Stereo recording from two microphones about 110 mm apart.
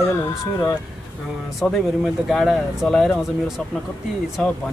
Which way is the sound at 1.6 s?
Centre (ahead or behind).